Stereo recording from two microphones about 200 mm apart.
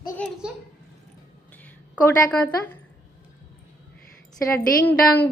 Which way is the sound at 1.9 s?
5° left (ahead or behind).